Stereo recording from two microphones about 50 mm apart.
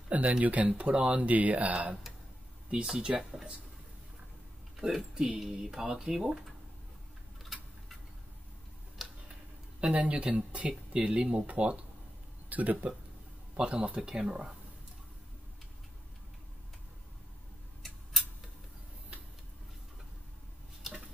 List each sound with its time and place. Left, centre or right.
0.4 s speech: right
2.7 s speech: centre
4.7 s speech: centre
5.1 s speech: centre
5.4 s speech: centre
9.0 s tick-tock: centre
9.8 s speech: right
12.4 s speech: right
13.6 s speech: right